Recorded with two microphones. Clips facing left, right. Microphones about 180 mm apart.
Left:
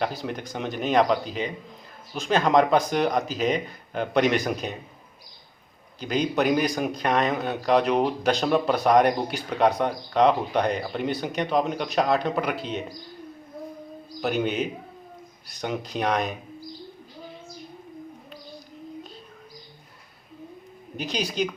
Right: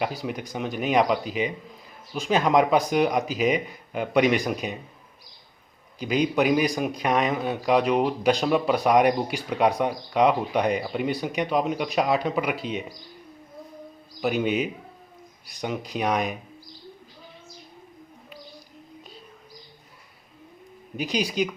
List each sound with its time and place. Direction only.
0.0 s speech: 5° right (ahead or behind)
6.0 s a man's voice: 5° right (ahead or behind)
14.2 s a man's voice: centre (ahead or behind)
20.9 s a man's voice: 5° right (ahead or behind)